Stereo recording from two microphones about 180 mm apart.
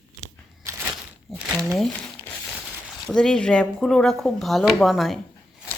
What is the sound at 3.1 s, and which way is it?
Speech, 5° left (ahead or behind).